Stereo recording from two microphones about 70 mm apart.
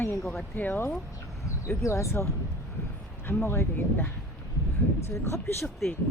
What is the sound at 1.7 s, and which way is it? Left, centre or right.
Speech, left.